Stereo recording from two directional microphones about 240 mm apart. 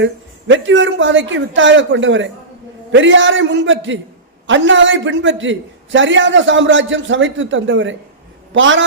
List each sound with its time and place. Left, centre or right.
0.0 s a man's voice: right